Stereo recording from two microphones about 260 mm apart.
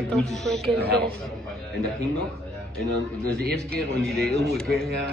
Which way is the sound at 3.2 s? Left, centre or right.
Right.